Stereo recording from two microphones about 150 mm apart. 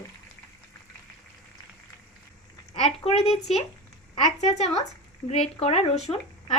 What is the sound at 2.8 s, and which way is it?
A woman's voice, 45° left (ahead or behind).